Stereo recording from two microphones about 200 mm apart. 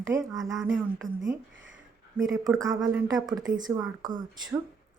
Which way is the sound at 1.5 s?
70° right (ahead or behind).